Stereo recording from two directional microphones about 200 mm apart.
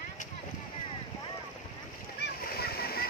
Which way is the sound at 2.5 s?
50° left (ahead or behind).